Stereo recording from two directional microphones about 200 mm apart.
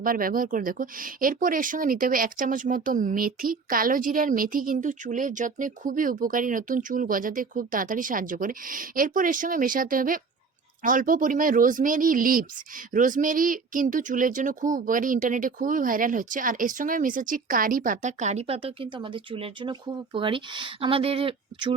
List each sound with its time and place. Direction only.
0.0 s speech: 45° right (ahead or behind); by 21.7 s 25° right (ahead or behind)